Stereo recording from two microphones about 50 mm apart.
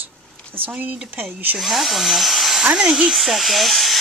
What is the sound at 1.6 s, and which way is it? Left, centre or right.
Speech, centre.